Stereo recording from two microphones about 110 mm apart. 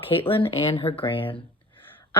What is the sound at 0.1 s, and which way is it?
Speech, 55° left (ahead or behind).